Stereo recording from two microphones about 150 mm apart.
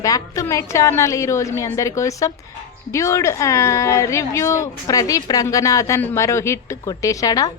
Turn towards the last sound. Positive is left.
turn(degrees=25)  # may be behind; listen again after turning